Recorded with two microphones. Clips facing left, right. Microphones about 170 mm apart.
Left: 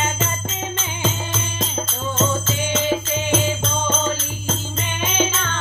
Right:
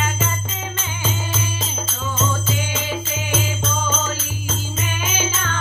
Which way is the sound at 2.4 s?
10° right (ahead or behind).